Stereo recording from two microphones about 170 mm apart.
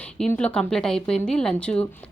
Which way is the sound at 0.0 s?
5° left (ahead or behind).